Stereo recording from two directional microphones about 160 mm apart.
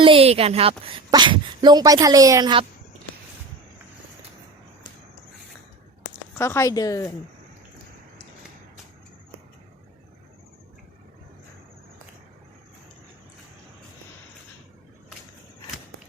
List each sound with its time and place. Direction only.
0.0 s a woman's voice: 35° right (ahead or behind)
6.3 s a woman's voice: 15° left (ahead or behind)